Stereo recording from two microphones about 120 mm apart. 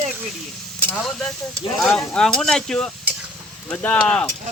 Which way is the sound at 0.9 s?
5° left (ahead or behind).